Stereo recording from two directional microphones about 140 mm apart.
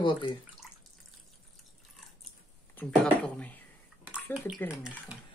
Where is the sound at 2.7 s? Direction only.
10° left (ahead or behind).